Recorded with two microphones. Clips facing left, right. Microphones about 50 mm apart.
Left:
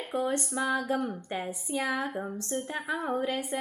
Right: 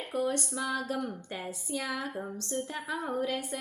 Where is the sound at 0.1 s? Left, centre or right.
Left.